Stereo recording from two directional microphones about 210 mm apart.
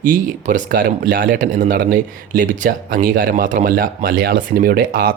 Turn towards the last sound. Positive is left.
turn(degrees=-45)  # may be behind; listen again after turning